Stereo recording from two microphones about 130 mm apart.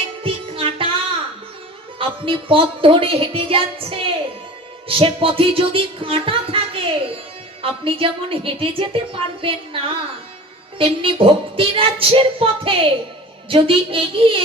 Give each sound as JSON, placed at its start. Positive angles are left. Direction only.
{"t": 0.2, "sound": "music", "side_deg": -45}
{"t": 2.0, "sound": "a woman's voice", "side_deg": -45}